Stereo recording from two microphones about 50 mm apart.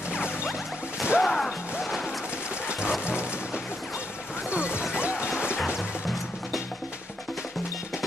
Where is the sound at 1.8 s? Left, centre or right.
Centre.